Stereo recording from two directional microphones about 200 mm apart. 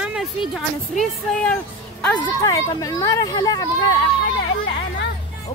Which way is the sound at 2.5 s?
20° left (ahead or behind).